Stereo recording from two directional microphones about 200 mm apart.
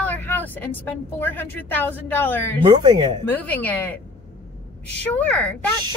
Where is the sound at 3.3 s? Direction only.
10° left (ahead or behind).